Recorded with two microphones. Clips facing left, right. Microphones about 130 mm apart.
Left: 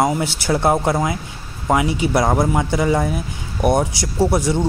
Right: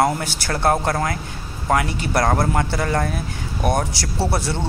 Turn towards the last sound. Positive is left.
turn(degrees=15)  # may be behind; listen again after turning